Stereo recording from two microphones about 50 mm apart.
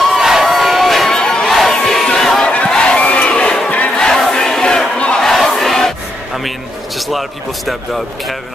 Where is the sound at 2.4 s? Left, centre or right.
Left.